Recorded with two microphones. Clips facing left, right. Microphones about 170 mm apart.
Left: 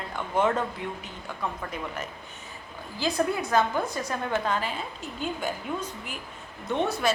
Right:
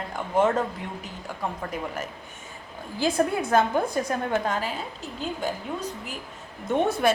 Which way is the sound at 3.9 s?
50° right (ahead or behind).